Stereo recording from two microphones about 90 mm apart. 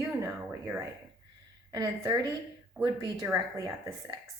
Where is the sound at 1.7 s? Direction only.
40° right (ahead or behind).